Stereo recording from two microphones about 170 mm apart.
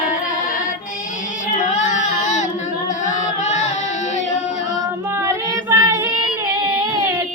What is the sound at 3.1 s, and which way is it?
Chant, 45° left (ahead or behind).